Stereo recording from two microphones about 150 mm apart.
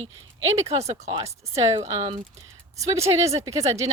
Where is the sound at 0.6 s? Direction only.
45° right (ahead or behind).